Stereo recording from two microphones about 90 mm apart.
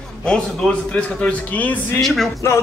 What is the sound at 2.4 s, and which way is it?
Music, 30° left (ahead or behind).